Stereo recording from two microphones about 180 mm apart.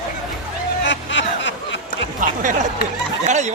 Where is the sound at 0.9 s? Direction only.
85° left.